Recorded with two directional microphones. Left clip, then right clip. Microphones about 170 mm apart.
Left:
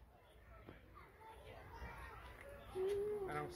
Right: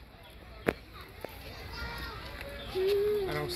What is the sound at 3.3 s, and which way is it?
Music, 45° right (ahead or behind).